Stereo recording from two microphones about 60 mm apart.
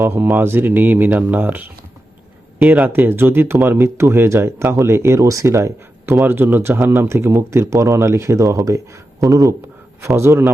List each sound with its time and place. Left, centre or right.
0.1 s speech: right
6.2 s speech: right
8.4 s speech: right
10.2 s speech: right